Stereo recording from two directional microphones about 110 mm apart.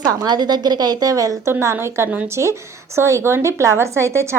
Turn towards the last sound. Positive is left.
turn(degrees=-25)  # may be behind; listen again after turning